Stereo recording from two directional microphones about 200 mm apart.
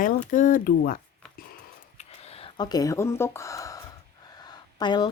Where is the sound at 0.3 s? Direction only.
40° left (ahead or behind).